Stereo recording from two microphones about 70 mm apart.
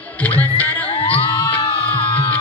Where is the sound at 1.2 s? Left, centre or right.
Left.